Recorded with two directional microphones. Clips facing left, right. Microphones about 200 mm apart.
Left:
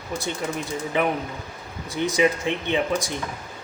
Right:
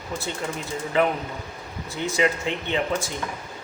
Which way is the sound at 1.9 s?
15° left (ahead or behind).